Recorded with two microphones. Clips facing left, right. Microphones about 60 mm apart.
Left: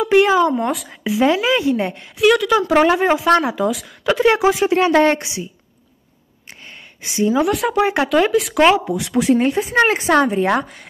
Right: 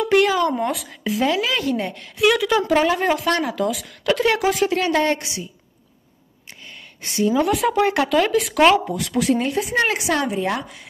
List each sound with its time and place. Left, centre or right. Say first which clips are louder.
0.0 s a sound: left 4 dB; centre
0.6 s speech: left 2 dB; centre
1.2 s a woman's voice: left 5 dB; left
2.1 s speech: left 3 dB; centre
2.7 s a woman's voice: left 5 dB; left
3.3 s a woman's voice: left 6 dB; left
4.0 s speech: left 3 dB; centre
4.6 s a woman's voice: left 8 dB; left
7.2 s a woman's voice: left 2 dB; left
7.4 s speech: left 1 dB; centre
7.7 s speech: left 2 dB; centre
8.1 s speech: left 3 dB; centre
9.1 s a woman's voice: left 4 dB; left